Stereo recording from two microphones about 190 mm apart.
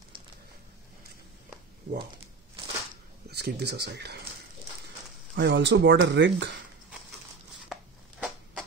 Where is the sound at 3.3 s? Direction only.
60° right (ahead or behind).